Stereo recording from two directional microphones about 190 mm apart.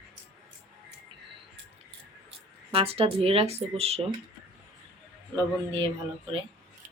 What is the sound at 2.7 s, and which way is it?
Speech, 30° right (ahead or behind).